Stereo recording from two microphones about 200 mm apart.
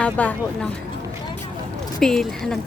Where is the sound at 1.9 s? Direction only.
Centre (ahead or behind).